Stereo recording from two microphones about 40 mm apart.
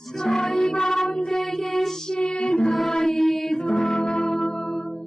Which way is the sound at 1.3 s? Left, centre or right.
Centre.